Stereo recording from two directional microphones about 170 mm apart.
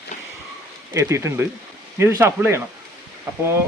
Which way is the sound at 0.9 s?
15° right (ahead or behind).